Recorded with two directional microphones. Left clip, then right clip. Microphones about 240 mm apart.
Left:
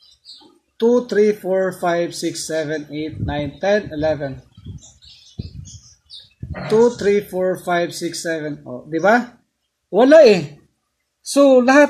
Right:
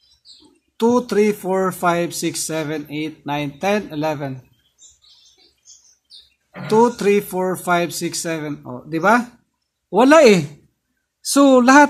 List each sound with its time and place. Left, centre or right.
0.7 s speech: right
7.0 s speech: right
11.3 s speech: right